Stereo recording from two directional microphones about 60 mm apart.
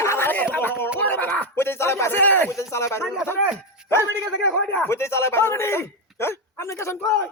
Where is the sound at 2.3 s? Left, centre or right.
Left.